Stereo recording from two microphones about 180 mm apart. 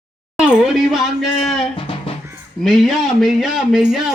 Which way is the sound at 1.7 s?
30° left (ahead or behind).